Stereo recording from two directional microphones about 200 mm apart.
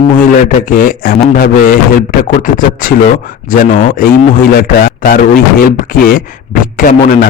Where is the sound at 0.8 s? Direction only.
45° left (ahead or behind).